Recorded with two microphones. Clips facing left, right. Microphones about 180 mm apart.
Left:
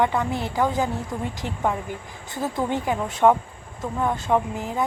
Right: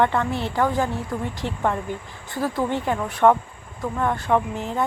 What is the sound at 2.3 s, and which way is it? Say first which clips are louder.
Speech: right 1 dB; 20° left (ahead or behind).